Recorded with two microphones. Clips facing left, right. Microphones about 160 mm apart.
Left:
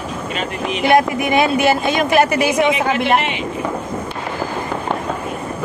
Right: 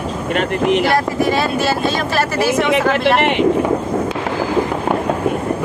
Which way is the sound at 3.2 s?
65° right (ahead or behind).